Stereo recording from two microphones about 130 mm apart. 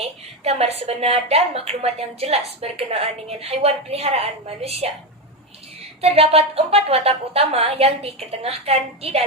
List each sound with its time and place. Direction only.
0.0 s a woman's voice: 55° right (ahead or behind)
6.0 s a woman's voice: 50° right (ahead or behind)